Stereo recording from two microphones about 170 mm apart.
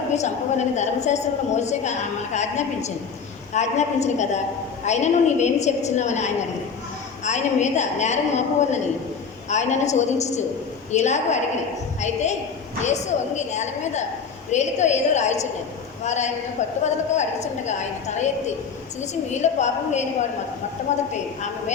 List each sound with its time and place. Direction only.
0.2 s a woman's voice: 45° left (ahead or behind)
19.3 s a woman's voice: 45° left (ahead or behind)